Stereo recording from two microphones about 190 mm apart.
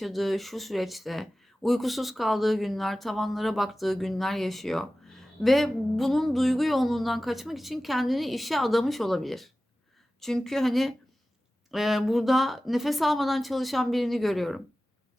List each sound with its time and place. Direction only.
0.0 s speech: centre (ahead or behind)